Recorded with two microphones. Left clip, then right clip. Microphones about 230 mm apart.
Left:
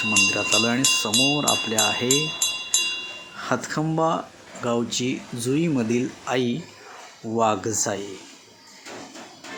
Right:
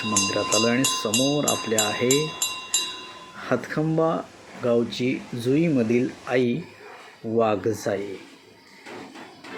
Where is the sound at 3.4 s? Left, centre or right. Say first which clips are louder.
Even; centre.